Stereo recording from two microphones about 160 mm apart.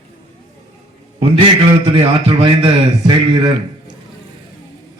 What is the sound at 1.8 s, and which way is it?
A man's voice, 35° right (ahead or behind).